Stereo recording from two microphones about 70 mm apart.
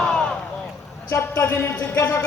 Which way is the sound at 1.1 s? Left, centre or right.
Left.